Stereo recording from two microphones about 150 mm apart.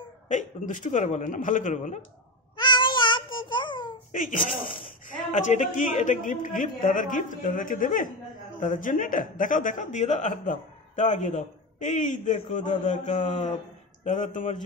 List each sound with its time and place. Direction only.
0.3 s speech: 55° left (ahead or behind)
2.5 s babbling: 30° left (ahead or behind)
4.1 s speech: 60° left (ahead or behind)